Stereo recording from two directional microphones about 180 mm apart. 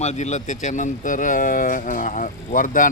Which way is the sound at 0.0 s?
40° left (ahead or behind).